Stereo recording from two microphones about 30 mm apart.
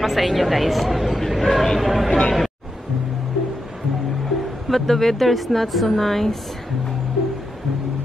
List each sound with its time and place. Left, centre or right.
0.0 s a woman's voice: centre
1.8 s a woman's voice: centre
2.0 s speech: left
4.6 s a woman's voice: centre